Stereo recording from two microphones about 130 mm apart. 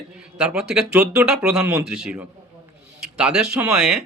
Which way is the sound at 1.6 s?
20° right (ahead or behind).